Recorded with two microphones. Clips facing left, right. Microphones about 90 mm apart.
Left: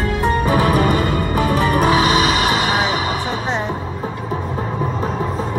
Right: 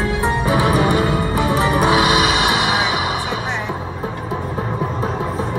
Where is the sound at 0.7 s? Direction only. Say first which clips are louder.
Even; 45° left (ahead or behind).